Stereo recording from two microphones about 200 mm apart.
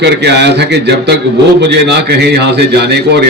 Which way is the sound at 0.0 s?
55° right (ahead or behind).